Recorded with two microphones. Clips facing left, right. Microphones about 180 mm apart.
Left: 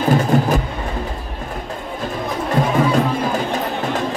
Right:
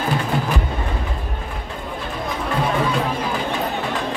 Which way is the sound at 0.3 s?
45° left (ahead or behind).